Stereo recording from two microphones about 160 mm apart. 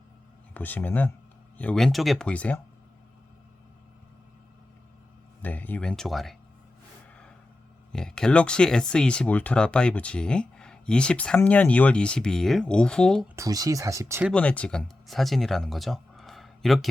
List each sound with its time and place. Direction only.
0.5 s speech: 10° left (ahead or behind)
5.4 s speech: 10° left (ahead or behind)
7.9 s speech: 5° left (ahead or behind)
13.2 s speech: 20° right (ahead or behind)
14.3 s speech: 10° left (ahead or behind)